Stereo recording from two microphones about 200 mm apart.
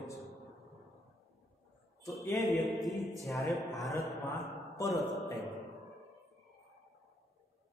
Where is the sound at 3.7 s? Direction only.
15° left (ahead or behind).